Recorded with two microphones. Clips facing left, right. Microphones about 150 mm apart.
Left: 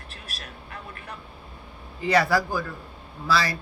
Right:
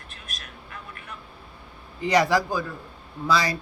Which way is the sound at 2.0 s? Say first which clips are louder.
Right 1 dB; 15° right (ahead or behind).